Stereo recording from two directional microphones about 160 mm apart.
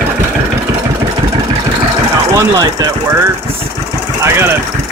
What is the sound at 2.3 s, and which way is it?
Speech, 20° right (ahead or behind).